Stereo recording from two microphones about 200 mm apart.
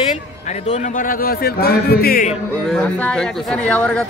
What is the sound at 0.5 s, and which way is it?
A man's voice, 35° left (ahead or behind).